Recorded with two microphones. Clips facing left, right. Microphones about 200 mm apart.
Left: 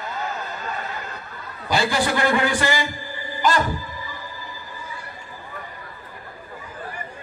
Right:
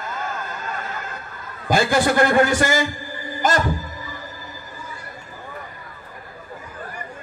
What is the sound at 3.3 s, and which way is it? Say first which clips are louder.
Music: even; 45° right (ahead or behind).